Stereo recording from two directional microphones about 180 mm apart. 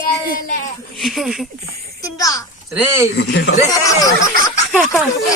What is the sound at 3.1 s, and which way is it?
Speech, 75° left (ahead or behind).